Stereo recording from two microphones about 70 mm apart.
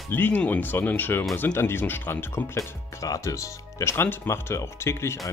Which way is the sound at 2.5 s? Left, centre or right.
Left.